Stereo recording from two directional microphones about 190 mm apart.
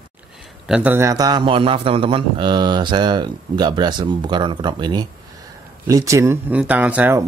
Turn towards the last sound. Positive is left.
turn(degrees=-10)  # may be behind; listen again after turning